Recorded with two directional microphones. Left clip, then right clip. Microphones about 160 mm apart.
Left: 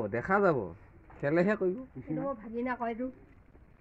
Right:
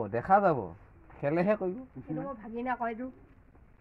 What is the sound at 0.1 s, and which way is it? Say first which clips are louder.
A man's voice: right 3 dB; 30° right (ahead or behind).